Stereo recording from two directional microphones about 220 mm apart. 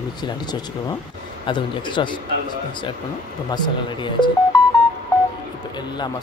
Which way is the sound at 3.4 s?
20° left (ahead or behind).